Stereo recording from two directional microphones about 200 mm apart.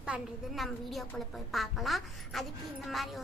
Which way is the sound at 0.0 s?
Centre (ahead or behind).